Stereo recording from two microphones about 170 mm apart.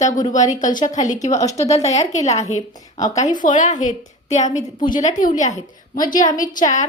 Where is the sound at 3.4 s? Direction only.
50° left (ahead or behind).